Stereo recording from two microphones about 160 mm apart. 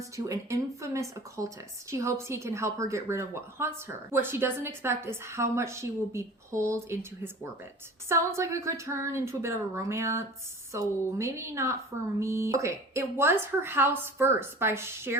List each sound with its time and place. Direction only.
0.3 s speech: 20° right (ahead or behind)
8.1 s speech: 15° right (ahead or behind)